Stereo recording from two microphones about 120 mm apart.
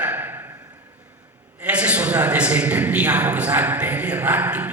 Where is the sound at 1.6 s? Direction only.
10° right (ahead or behind).